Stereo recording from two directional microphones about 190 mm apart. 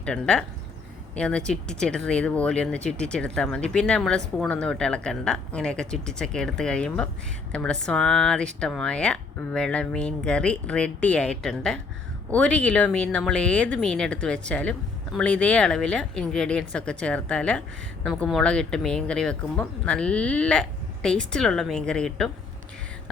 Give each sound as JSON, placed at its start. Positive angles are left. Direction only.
{"t": 0.0, "sound": "speech", "side_deg": 5}